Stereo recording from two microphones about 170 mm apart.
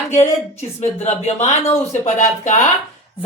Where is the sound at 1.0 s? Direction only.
40° left (ahead or behind).